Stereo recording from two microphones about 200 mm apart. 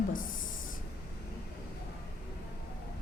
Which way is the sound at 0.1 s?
40° left (ahead or behind).